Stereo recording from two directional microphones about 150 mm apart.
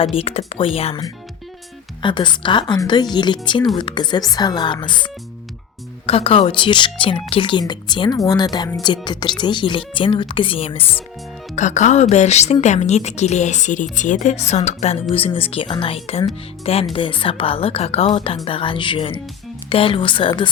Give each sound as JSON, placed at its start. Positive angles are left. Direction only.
{"t": 0.0, "sound": "speech", "side_deg": 40}
{"t": 11.5, "sound": "a woman's voice", "side_deg": 55}
{"t": 15.1, "sound": "speech", "side_deg": 40}